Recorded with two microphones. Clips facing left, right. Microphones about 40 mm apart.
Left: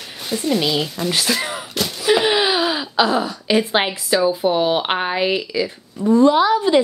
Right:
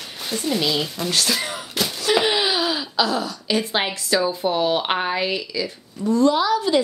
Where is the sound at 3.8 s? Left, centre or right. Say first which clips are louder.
Left 3 dB; centre.